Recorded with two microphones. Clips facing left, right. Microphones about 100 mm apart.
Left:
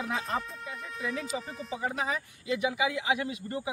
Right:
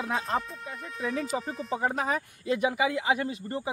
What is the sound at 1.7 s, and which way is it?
Speech, 50° right (ahead or behind).